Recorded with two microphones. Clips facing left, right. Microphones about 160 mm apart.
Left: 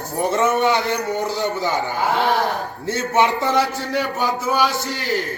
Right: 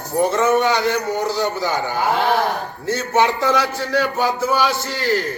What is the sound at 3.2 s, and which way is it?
Speech, 20° left (ahead or behind).